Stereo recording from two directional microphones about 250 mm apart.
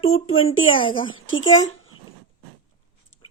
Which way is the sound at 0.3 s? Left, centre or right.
Left.